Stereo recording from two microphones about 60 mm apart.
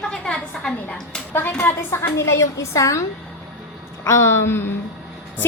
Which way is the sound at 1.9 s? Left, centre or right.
Left.